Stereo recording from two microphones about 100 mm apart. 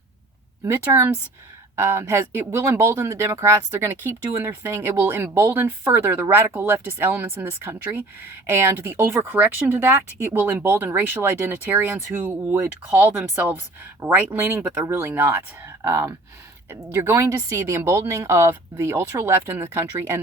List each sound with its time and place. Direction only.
0.6 s speech: 30° right (ahead or behind)
15.6 s a sound: 25° right (ahead or behind)
16.9 s speech: 25° right (ahead or behind)